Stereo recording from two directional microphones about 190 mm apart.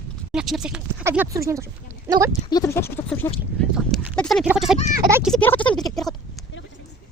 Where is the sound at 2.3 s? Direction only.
20° left (ahead or behind).